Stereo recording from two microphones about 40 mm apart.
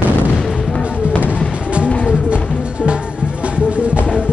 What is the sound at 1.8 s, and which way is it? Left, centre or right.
Music, left.